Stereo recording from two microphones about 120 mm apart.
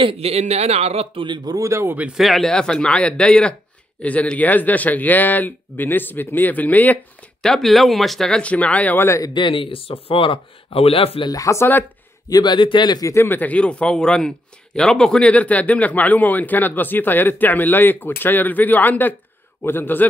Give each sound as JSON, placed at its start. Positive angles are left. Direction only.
{"t": 0.0, "sound": "a man's voice", "side_deg": -55}
{"t": 1.2, "sound": "speech", "side_deg": -35}
{"t": 2.0, "sound": "speech", "side_deg": -5}
{"t": 7.4, "sound": "speech", "side_deg": 0}
{"t": 9.3, "sound": "speech", "side_deg": 40}
{"t": 11.2, "sound": "speech", "side_deg": 30}
{"t": 12.3, "sound": "speech", "side_deg": 35}
{"t": 13.1, "sound": "speech", "side_deg": 20}